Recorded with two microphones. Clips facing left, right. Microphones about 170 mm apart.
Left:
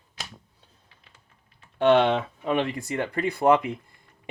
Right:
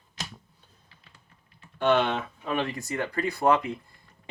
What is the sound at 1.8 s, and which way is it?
Speech, 30° left (ahead or behind).